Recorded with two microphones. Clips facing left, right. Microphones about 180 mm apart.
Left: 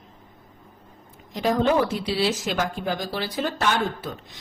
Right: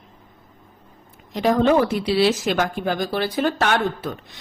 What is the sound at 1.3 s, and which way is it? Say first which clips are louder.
Speech: right 4 dB; 65° right (ahead or behind).